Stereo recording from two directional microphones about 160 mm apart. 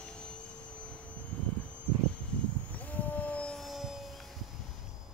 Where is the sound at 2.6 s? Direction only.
10° left (ahead or behind).